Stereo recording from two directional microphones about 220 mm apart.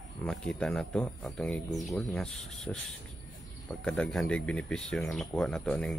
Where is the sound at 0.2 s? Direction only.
5° left (ahead or behind).